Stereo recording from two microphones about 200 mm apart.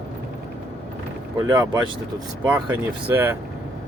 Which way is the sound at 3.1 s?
10° right (ahead or behind).